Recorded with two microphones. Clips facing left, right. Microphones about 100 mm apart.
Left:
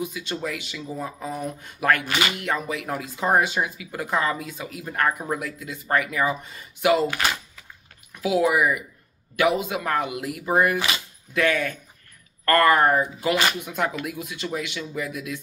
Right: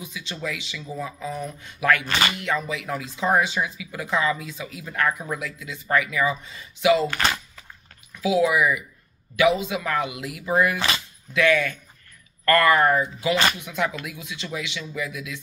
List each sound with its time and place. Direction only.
0.0 s speech: 50° left (ahead or behind)
7.1 s speech: 10° left (ahead or behind)
8.1 s speech: 50° left (ahead or behind)
13.3 s speech: 10° left (ahead or behind)
13.7 s speech: 45° left (ahead or behind)